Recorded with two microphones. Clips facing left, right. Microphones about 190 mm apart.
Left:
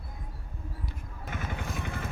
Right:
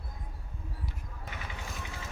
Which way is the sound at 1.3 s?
50° left (ahead or behind).